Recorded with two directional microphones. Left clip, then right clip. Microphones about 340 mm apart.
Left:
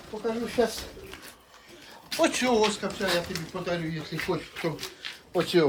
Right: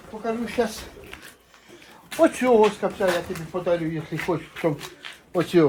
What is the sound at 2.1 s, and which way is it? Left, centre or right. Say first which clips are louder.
Speech: right 6 dB; centre.